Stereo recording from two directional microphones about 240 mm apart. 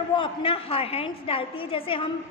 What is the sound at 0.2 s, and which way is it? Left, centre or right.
A woman's voice, left.